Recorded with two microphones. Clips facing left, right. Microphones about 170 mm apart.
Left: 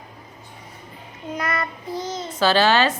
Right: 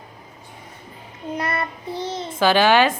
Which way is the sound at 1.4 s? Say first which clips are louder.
Even; 30° right (ahead or behind).